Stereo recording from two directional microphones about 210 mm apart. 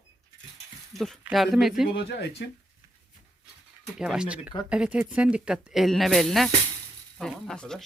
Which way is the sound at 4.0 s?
5° right (ahead or behind).